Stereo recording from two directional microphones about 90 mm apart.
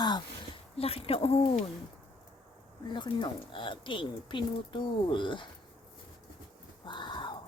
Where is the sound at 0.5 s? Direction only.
90° left.